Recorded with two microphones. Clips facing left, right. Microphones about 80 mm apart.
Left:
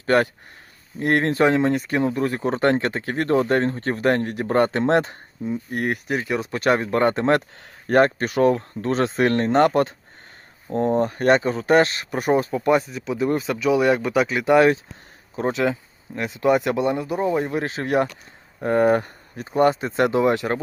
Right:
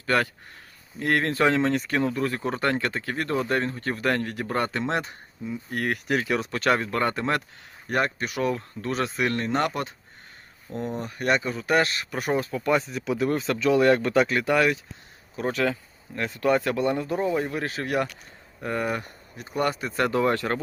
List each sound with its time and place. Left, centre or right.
0.0 s speech: left
5.7 s speech: left
6.1 s speech: centre
6.5 s speech: centre
12.9 s speech: centre
14.4 s speech: left
17.5 s speech: left
18.6 s speech: left
19.5 s speech: left